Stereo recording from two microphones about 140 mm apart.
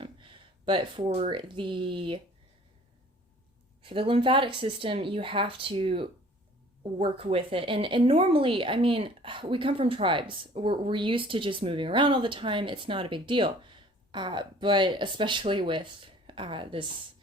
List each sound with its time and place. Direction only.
0.0 s a sound: 35° right (ahead or behind)
1.0 s speech: 50° right (ahead or behind)
1.3 s a woman's voice: 35° right (ahead or behind)
3.8 s a woman's voice: 40° right (ahead or behind)